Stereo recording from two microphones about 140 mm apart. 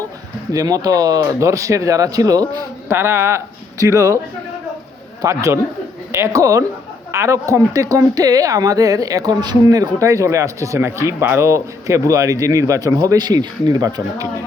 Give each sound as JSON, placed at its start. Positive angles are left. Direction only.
{"t": 0.5, "sound": "speech", "side_deg": -25}
{"t": 5.2, "sound": "a woman's voice", "side_deg": -20}